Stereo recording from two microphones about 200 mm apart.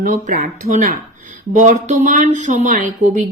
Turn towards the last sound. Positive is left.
turn(degrees=-40)  # may be behind; listen again after turning